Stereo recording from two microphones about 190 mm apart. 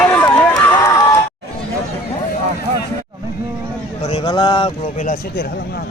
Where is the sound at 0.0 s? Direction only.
5° left (ahead or behind).